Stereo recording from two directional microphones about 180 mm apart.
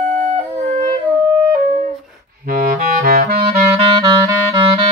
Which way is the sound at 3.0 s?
55° right (ahead or behind).